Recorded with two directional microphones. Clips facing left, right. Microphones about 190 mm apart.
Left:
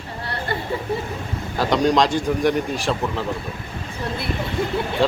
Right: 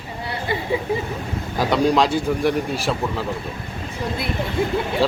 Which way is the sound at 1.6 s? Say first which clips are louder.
Even; 10° right (ahead or behind).